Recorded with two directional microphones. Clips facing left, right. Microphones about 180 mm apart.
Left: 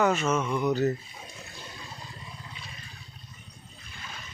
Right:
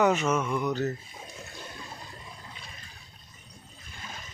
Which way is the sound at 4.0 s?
45° right (ahead or behind).